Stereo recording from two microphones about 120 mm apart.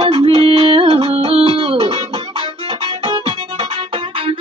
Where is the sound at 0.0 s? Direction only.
55° right (ahead or behind).